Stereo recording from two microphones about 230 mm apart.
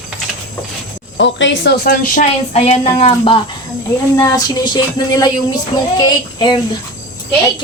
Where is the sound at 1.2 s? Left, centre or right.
Left.